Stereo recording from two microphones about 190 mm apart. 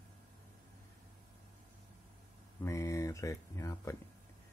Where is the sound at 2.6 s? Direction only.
15° left (ahead or behind).